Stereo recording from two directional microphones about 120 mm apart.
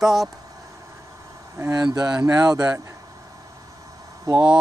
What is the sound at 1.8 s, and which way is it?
Speech, 35° right (ahead or behind).